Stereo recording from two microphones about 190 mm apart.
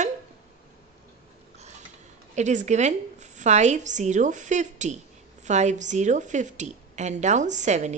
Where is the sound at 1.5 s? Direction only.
35° right (ahead or behind).